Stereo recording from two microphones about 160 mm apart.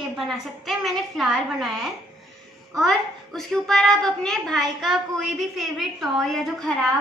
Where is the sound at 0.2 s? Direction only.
Centre (ahead or behind).